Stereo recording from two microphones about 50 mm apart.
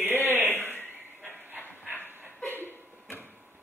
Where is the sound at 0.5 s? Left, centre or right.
Left.